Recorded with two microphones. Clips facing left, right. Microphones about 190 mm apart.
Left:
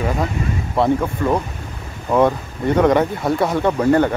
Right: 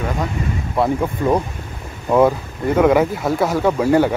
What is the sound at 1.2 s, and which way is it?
Speech, 15° right (ahead or behind).